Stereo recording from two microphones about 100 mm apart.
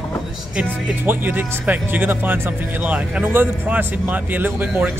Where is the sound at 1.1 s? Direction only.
20° right (ahead or behind).